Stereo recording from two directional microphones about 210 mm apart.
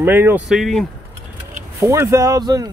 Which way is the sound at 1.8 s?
15° right (ahead or behind).